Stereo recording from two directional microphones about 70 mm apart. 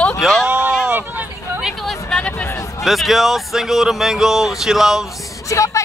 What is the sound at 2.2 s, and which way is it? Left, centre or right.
Speech, centre.